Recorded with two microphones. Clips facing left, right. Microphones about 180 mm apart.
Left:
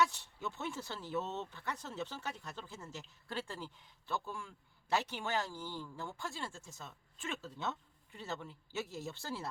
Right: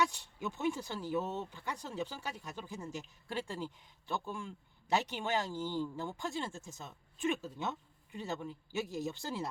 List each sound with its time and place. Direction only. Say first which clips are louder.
0.0 s speech: even; 15° right (ahead or behind)